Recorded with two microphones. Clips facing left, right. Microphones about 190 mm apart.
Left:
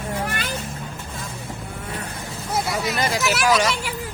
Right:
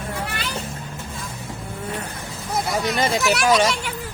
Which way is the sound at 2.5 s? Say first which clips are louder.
Right 1 dB; centre (ahead or behind).